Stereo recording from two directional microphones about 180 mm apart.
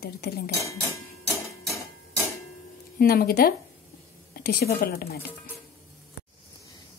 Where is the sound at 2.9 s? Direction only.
55° left (ahead or behind).